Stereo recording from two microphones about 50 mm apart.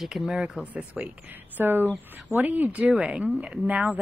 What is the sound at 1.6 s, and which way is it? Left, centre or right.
A woman's voice, right.